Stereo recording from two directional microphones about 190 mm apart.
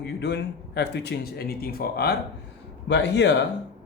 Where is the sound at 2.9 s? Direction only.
65° left (ahead or behind).